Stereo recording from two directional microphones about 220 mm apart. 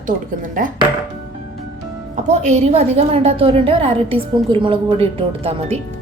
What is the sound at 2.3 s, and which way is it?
Speech, 30° right (ahead or behind).